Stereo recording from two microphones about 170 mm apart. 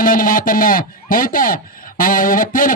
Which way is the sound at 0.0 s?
55° left (ahead or behind).